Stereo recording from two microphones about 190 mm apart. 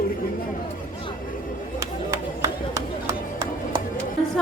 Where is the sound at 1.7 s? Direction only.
20° right (ahead or behind).